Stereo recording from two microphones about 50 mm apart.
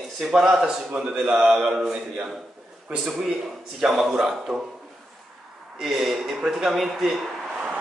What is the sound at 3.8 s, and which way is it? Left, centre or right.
Speech, centre.